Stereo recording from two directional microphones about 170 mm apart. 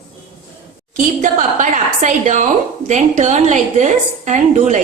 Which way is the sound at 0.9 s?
50° right (ahead or behind).